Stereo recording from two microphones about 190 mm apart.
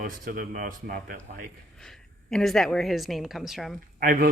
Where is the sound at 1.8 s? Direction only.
5° left (ahead or behind).